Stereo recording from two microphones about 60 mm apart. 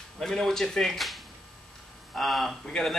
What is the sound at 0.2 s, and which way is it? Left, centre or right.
Speech, centre.